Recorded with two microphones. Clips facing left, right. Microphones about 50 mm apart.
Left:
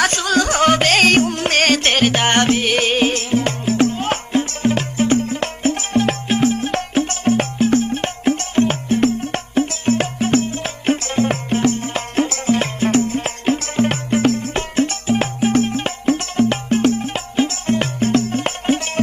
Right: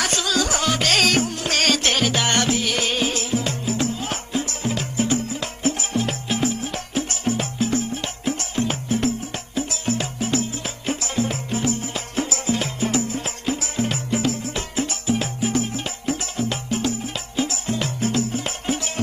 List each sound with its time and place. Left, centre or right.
0.0 s music: left